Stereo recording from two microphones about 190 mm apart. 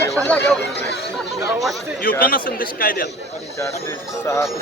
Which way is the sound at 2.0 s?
50° left (ahead or behind).